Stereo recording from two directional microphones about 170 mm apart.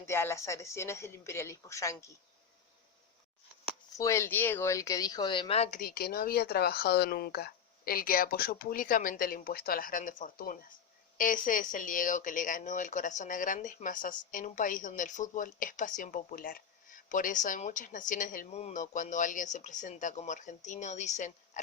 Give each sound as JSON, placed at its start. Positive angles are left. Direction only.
{"t": 0.0, "sound": "a woman's voice", "side_deg": 15}
{"t": 3.9, "sound": "speech", "side_deg": 15}
{"t": 5.8, "sound": "speech", "side_deg": 60}